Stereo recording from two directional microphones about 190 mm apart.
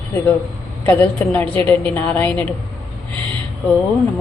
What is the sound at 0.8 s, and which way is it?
A woman's voice, 10° left (ahead or behind).